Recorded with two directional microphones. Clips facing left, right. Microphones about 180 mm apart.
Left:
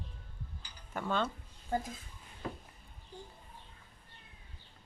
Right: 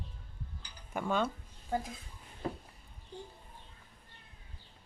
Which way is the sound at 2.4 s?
35° right (ahead or behind).